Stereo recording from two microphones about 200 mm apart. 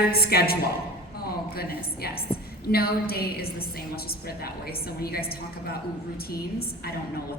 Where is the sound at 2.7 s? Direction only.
50° left (ahead or behind).